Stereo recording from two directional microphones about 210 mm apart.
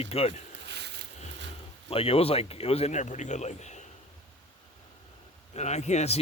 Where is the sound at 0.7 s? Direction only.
55° right (ahead or behind).